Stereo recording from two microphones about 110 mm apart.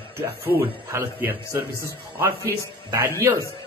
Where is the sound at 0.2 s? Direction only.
20° right (ahead or behind).